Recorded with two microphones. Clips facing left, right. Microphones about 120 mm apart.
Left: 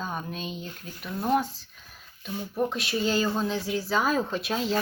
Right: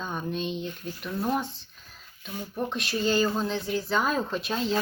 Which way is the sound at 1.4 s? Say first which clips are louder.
Left 3 dB; 40° left (ahead or behind).